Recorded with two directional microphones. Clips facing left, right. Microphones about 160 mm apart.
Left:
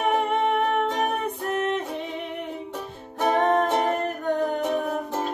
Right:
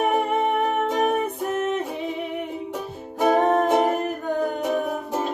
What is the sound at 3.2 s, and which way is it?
Music, 5° right (ahead or behind).